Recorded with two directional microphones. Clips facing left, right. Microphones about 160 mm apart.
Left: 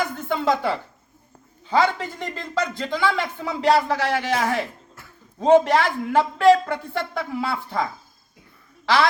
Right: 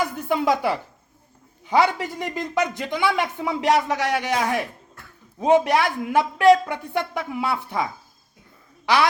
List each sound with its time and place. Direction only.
0.2 s a woman's voice: 10° right (ahead or behind)